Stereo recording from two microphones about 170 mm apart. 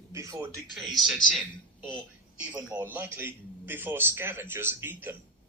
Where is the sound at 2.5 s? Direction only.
10° right (ahead or behind).